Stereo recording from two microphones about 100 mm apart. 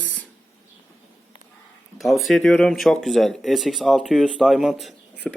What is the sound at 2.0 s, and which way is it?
Speech, centre (ahead or behind).